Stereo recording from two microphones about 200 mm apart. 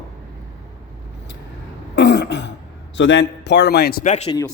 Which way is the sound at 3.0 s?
65° left (ahead or behind).